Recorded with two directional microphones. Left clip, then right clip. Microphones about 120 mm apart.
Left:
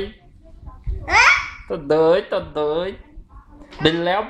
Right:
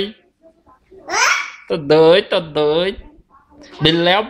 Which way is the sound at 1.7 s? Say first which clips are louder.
Right 5 dB; 45° right (ahead or behind).